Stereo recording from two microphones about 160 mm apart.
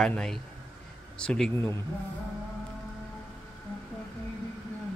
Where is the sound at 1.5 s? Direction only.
15° left (ahead or behind).